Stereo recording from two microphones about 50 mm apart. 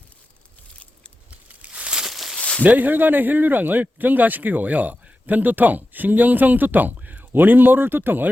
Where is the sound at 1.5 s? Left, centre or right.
Right.